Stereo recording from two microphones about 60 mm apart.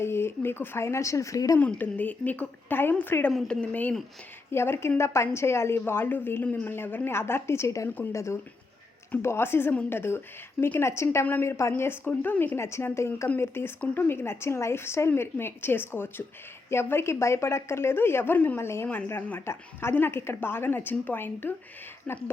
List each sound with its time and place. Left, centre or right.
0.0 s speech: left
1.8 s a woman's voice: left
3.4 s speech: centre
3.7 s a woman's voice: left
4.5 s a woman's voice: left
9.2 s a woman's voice: left
11.8 s a woman's voice: left
12.5 s a woman's voice: left